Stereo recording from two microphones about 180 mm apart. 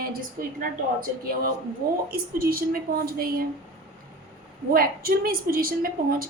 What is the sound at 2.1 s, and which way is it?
A woman's voice, 55° right (ahead or behind).